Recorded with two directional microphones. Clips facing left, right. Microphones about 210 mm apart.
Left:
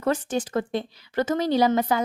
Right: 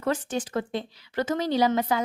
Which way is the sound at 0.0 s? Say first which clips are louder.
Left 3 dB; 40° left (ahead or behind).